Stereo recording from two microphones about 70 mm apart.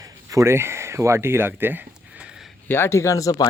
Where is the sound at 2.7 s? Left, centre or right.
Left.